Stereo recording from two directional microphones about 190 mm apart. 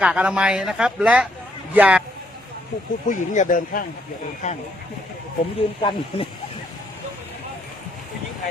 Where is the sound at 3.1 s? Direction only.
45° left (ahead or behind).